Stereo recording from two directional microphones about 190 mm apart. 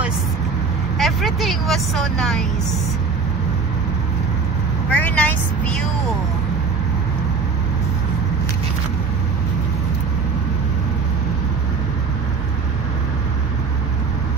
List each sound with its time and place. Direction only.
0.9 s a woman's voice: centre (ahead or behind)
4.8 s vehicle: 10° left (ahead or behind)